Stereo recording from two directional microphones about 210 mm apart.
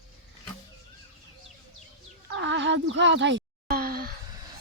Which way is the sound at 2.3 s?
60° right (ahead or behind).